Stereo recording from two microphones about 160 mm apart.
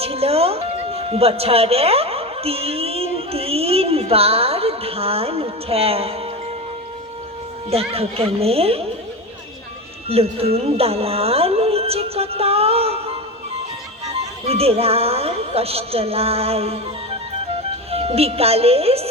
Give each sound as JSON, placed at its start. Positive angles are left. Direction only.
{"t": 0.0, "sound": "a woman's voice", "side_deg": -40}
{"t": 7.7, "sound": "a woman's voice", "side_deg": -40}
{"t": 10.1, "sound": "speech", "side_deg": -40}
{"t": 14.4, "sound": "a woman's voice", "side_deg": -40}
{"t": 17.9, "sound": "a woman's voice", "side_deg": -40}